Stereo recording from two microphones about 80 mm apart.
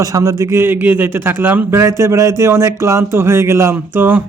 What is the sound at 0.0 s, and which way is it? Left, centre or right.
A man's voice, right.